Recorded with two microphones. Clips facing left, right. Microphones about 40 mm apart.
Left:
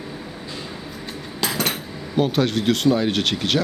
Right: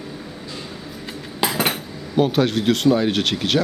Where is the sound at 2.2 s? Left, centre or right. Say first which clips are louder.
Right 2 dB; centre.